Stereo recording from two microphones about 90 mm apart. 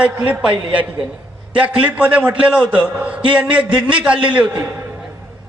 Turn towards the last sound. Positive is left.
turn(degrees=-15)  # may be behind; listen again after turning